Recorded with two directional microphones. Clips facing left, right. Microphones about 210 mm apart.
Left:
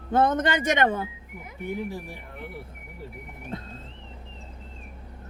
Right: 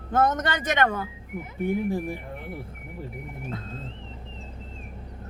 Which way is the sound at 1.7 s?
55° right (ahead or behind).